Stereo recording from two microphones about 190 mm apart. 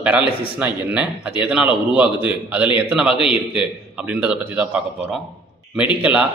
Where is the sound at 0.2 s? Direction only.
30° left (ahead or behind).